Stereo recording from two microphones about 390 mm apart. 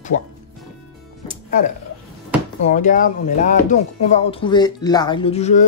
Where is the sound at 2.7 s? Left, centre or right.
Centre.